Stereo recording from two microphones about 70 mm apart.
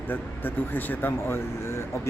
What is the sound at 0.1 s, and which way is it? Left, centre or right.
Speech, left.